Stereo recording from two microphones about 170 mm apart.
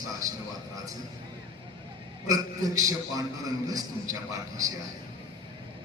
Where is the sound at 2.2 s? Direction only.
20° right (ahead or behind).